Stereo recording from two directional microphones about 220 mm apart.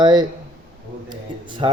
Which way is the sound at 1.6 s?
20° right (ahead or behind).